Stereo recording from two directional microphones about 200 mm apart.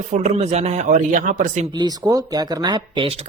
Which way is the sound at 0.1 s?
35° right (ahead or behind).